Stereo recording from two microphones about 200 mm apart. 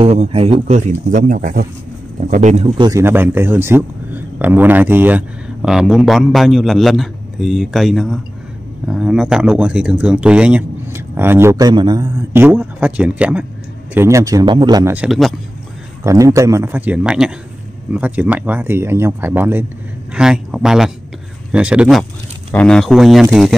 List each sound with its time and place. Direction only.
0.0 s a man's voice: 30° right (ahead or behind)
2.8 s a man's voice: 15° right (ahead or behind)
15.0 s a man's voice: centre (ahead or behind)
16.0 s a man's voice: 15° right (ahead or behind)